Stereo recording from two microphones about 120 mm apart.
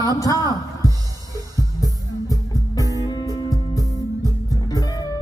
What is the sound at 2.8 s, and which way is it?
Music, 30° left (ahead or behind).